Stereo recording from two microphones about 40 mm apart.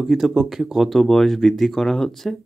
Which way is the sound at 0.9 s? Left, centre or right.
Centre.